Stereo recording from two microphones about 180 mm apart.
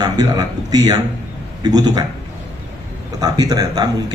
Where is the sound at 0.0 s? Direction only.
20° right (ahead or behind).